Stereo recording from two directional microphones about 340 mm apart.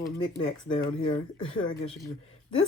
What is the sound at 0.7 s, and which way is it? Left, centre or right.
Speech, centre.